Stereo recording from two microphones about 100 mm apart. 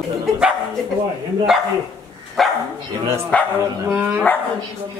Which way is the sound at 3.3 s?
10° left (ahead or behind).